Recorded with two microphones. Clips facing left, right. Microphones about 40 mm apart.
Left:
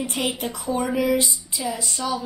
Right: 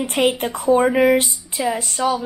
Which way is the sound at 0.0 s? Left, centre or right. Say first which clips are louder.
Right 7 dB; right.